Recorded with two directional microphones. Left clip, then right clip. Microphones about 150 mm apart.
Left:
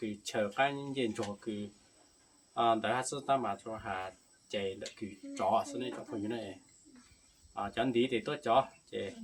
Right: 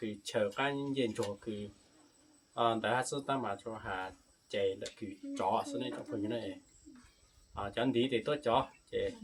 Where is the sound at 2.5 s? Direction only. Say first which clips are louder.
Left 1 dB; 15° left (ahead or behind).